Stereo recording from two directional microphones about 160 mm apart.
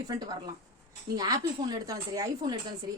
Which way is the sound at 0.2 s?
25° right (ahead or behind).